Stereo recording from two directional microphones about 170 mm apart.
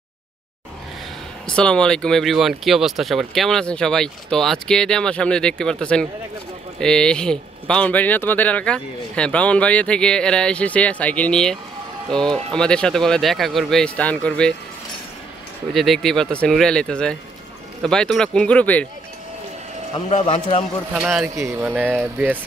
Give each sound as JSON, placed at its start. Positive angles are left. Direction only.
{"t": 1.5, "sound": "speech", "side_deg": 5}
{"t": 15.7, "sound": "speech", "side_deg": 0}
{"t": 20.1, "sound": "a man's voice", "side_deg": 40}
{"t": 20.9, "sound": "speech", "side_deg": -5}
{"t": 21.4, "sound": "speech", "side_deg": -15}